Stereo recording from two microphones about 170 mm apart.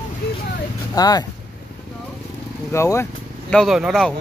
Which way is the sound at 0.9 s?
20° left (ahead or behind).